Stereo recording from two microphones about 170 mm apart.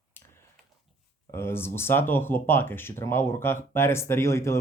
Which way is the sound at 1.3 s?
15° left (ahead or behind).